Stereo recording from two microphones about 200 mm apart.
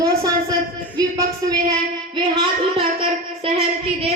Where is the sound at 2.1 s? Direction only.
25° right (ahead or behind).